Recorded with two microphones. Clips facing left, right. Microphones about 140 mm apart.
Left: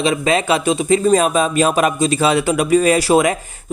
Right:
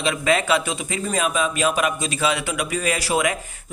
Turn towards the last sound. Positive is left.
turn(degrees=35)  # may be behind; listen again after turning